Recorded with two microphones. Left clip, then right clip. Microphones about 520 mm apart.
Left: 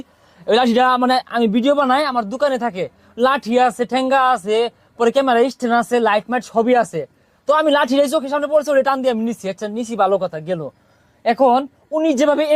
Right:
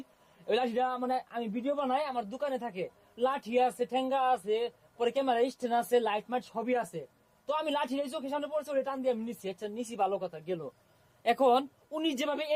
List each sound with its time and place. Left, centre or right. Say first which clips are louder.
0.4 s speech: left 16 dB; centre